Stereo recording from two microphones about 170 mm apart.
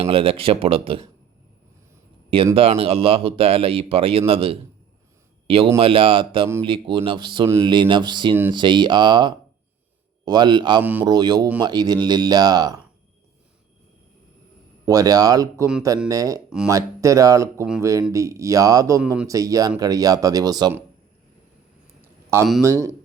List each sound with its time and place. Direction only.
0.0 s speech: 35° right (ahead or behind)
2.6 s speech: 35° right (ahead or behind)
7.4 s speech: 15° right (ahead or behind)
7.7 s speech: 30° right (ahead or behind)
14.8 s speech: 20° right (ahead or behind)
22.0 s a sound: 15° right (ahead or behind)
22.6 s speech: 20° right (ahead or behind)